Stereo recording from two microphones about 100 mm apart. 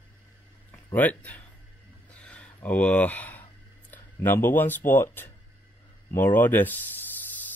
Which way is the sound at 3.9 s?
20° left (ahead or behind).